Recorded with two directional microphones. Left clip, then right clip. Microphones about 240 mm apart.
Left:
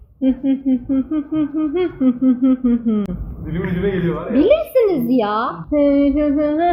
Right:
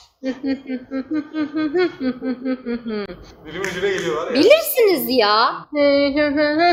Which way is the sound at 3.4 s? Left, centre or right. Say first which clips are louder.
Even; centre.